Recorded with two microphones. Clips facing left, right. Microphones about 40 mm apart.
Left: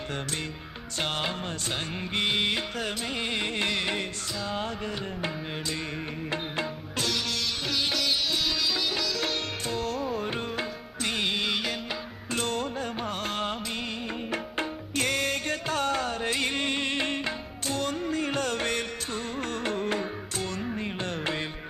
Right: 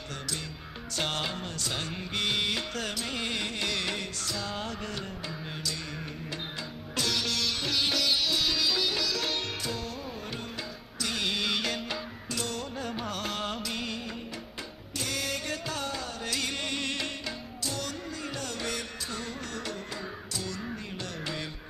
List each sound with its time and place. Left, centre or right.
1.7 s music: left
3.5 s music: left
3.8 s music: left
7.1 s sitar: centre
9.6 s music: left
11.2 s music: centre
11.5 s music: centre
12.3 s music: left
12.9 s music: left
14.9 s music: left
16.2 s music: left